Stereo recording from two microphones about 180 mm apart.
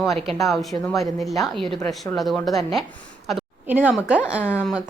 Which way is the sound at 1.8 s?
20° left (ahead or behind).